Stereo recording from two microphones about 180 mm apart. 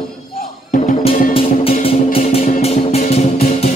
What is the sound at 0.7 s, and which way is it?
Music, 35° left (ahead or behind).